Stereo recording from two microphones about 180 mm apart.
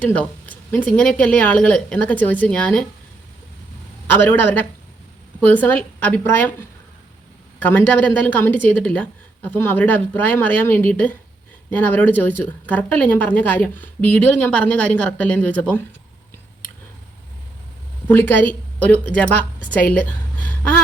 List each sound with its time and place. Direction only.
0.0 s a woman's voice: 10° left (ahead or behind)
4.1 s a woman's voice: 10° left (ahead or behind)
7.6 s a woman's voice: 10° left (ahead or behind)
18.1 s a woman's voice: 10° left (ahead or behind)
19.9 s a sound: 10° left (ahead or behind)